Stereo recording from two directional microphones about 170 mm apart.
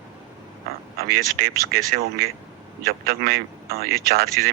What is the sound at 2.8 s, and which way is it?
A man's voice, 65° right (ahead or behind).